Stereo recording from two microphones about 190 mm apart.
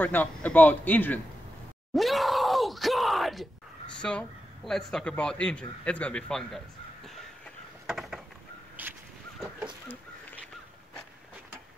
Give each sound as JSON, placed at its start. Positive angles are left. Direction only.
{"t": 0.0, "sound": "a man's voice", "side_deg": 10}
{"t": 2.0, "sound": "groan", "side_deg": 0}
{"t": 4.0, "sound": "a man's voice", "side_deg": 5}
{"t": 7.8, "sound": "a sound", "side_deg": 0}